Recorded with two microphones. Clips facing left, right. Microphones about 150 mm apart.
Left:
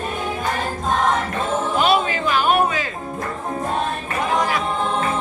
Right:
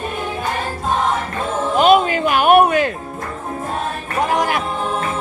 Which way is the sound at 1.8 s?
50° right (ahead or behind).